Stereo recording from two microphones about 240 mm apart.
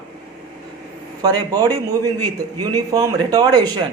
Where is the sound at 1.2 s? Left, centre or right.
Centre.